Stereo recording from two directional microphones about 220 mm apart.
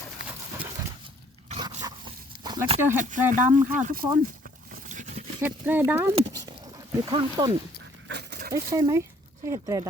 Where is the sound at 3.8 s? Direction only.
40° right (ahead or behind).